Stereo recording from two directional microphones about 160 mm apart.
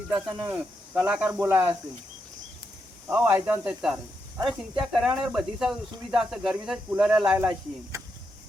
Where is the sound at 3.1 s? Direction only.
15° right (ahead or behind).